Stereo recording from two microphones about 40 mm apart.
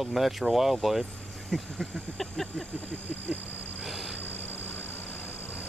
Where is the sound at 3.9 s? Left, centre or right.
Centre.